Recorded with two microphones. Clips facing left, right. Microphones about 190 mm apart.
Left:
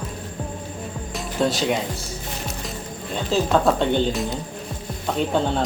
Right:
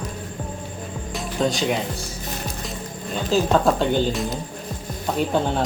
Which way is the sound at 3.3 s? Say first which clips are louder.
Right 1 dB; centre (ahead or behind).